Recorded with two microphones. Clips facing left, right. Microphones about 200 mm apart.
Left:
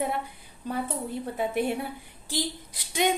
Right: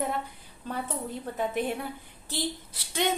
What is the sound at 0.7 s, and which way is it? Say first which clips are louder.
Speech: left 3 dB; 15° left (ahead or behind).